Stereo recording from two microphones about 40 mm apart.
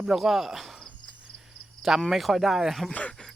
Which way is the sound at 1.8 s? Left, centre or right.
Centre.